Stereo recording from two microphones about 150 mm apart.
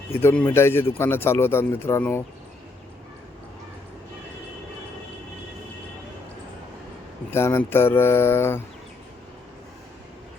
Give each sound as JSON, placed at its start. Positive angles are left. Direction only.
{"t": 0.2, "sound": "a man's voice", "side_deg": 15}
{"t": 7.3, "sound": "a man's voice", "side_deg": 15}